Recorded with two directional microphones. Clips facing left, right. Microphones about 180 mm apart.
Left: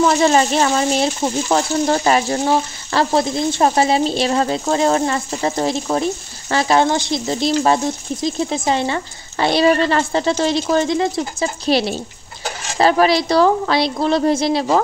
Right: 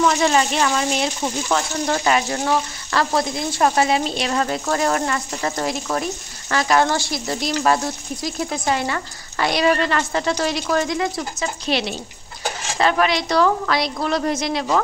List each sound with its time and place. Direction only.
0.0 s a woman's voice: 35° left (ahead or behind)